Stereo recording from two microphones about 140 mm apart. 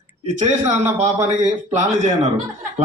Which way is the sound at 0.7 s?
55° right (ahead or behind).